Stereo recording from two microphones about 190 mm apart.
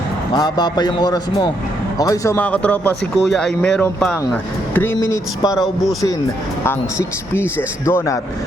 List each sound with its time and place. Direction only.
0.3 s a man's voice: 20° left (ahead or behind)
5.5 s speech: centre (ahead or behind)
6.7 s speech: 10° left (ahead or behind)